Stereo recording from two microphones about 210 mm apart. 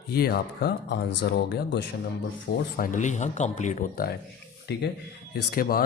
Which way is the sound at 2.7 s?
40° left (ahead or behind).